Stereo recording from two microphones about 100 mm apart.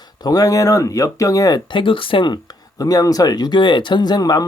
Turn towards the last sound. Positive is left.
turn(degrees=40)  # may be behind; listen again after turning